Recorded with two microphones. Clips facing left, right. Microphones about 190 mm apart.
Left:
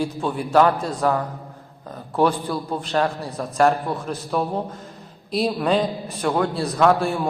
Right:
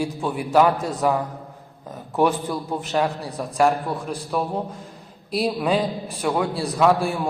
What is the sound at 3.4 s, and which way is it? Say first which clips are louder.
A man's voice: left 1 dB; 5° right (ahead or behind).